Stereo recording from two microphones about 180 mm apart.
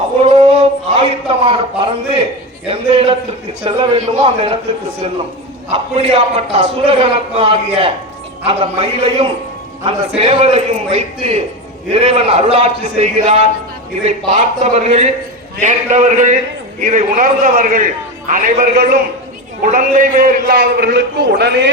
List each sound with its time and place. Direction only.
0.2 s a sound: 35° right (ahead or behind)
2.6 s a man's voice: 30° right (ahead or behind)
5.7 s a man's voice: 35° right (ahead or behind); by 21.7 s 75° right (ahead or behind)